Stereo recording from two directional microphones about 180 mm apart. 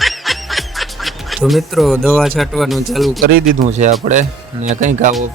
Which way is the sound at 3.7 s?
40° right (ahead or behind).